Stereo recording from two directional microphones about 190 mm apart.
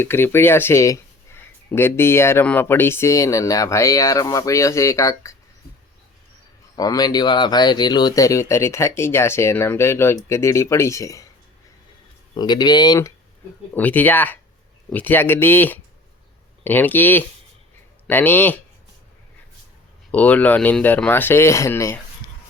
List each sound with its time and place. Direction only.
0.0 s speech: 10° left (ahead or behind)
6.7 s speech: 20° left (ahead or behind)
12.3 s speech: 20° left (ahead or behind)
20.1 s speech: 10° left (ahead or behind)